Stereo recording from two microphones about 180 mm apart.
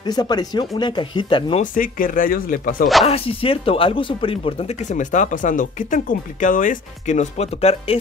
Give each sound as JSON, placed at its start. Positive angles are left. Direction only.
{"t": 0.0, "sound": "speech", "side_deg": 20}
{"t": 1.6, "sound": "speech", "side_deg": 50}
{"t": 3.1, "sound": "speech", "side_deg": 30}